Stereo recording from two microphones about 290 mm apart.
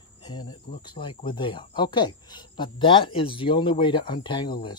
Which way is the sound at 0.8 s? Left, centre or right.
Centre.